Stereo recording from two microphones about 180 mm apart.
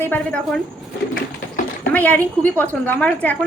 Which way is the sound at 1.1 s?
50° left (ahead or behind).